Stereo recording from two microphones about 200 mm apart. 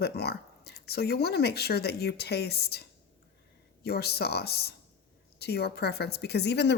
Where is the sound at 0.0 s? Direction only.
55° left (ahead or behind).